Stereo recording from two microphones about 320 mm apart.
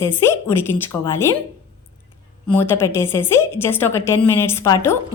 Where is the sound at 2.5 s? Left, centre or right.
Centre.